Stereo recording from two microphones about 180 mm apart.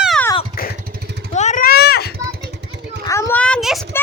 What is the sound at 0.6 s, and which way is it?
Motorcycle, 60° left (ahead or behind).